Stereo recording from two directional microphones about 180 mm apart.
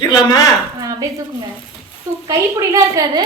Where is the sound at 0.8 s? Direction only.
20° right (ahead or behind).